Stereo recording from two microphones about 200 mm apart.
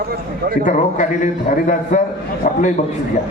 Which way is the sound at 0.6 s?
40° left (ahead or behind).